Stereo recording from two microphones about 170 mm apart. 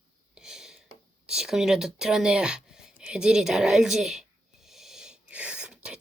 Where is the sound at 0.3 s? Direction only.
5° right (ahead or behind).